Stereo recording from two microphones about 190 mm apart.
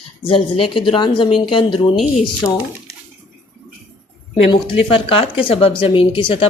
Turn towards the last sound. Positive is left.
turn(degrees=25)  # may be behind; listen again after turning